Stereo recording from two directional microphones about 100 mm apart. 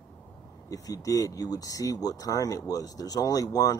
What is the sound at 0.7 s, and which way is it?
Speech, 35° left (ahead or behind).